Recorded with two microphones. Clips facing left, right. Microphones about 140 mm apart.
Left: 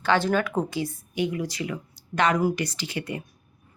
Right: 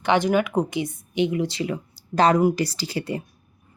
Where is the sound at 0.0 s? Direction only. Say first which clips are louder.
Right 3 dB; 15° right (ahead or behind).